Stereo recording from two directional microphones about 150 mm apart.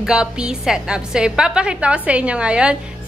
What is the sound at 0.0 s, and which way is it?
A woman's voice, 5° right (ahead or behind).